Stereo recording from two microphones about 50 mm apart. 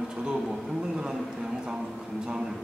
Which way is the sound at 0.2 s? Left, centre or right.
Centre.